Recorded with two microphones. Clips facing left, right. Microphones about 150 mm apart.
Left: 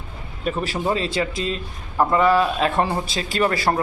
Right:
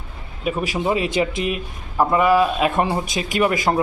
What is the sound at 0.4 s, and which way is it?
Speech, 10° right (ahead or behind).